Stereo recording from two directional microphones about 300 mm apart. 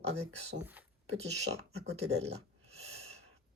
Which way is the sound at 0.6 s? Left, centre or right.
Centre.